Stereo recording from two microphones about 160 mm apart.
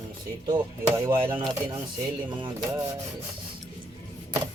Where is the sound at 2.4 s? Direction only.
25° right (ahead or behind).